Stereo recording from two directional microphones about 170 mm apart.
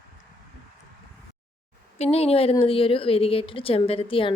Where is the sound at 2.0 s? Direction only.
35° left (ahead or behind).